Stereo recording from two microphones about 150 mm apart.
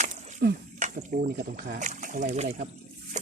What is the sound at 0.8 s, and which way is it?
Speech, 60° right (ahead or behind).